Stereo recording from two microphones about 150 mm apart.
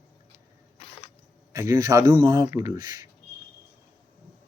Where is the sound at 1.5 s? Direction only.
20° right (ahead or behind).